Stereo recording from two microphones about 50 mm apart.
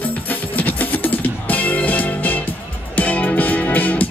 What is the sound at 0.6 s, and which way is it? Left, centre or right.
Music, left.